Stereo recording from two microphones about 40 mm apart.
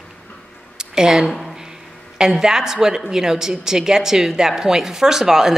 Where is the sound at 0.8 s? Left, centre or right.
Centre.